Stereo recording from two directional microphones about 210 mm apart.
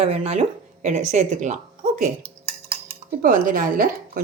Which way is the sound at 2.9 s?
40° right (ahead or behind).